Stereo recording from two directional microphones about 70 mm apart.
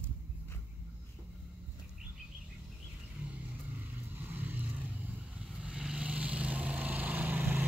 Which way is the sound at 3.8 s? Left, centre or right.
Right.